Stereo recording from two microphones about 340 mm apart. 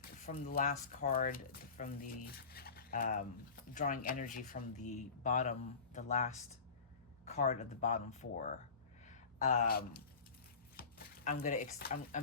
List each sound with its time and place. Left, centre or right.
0.0 s speech: left